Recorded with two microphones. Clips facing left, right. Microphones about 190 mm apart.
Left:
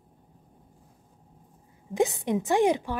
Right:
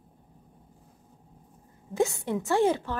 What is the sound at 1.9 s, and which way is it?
A woman's voice, 20° left (ahead or behind).